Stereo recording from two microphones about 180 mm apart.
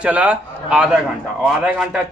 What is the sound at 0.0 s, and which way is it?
A man's voice, 10° right (ahead or behind).